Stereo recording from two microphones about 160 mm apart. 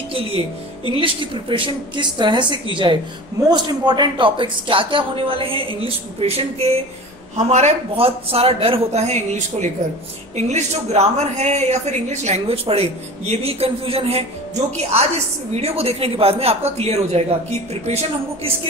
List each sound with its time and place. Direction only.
0.8 s speech: 35° right (ahead or behind)